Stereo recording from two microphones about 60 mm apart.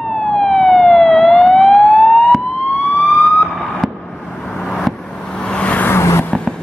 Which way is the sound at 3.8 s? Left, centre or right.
Centre.